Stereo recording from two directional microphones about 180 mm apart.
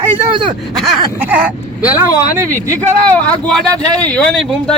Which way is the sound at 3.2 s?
5° left (ahead or behind).